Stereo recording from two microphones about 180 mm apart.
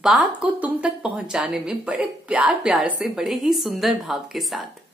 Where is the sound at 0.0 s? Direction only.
Centre (ahead or behind).